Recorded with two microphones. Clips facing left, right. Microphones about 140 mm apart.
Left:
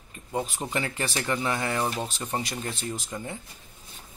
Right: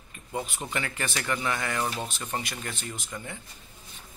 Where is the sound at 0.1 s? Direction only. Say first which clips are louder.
Left 3 dB; 30° left (ahead or behind).